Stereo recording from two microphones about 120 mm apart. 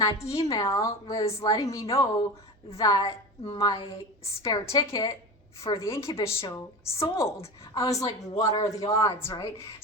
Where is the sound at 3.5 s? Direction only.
30° left (ahead or behind).